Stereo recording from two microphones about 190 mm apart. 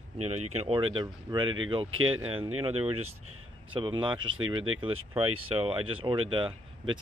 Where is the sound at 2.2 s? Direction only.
30° right (ahead or behind).